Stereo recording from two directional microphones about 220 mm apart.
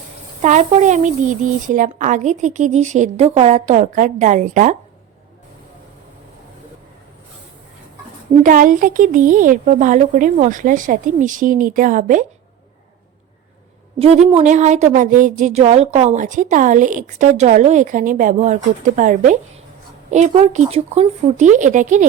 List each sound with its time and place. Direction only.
0.4 s a woman's voice: 35° right (ahead or behind)
8.4 s a woman's voice: 35° right (ahead or behind)
14.0 s a woman's voice: 30° right (ahead or behind)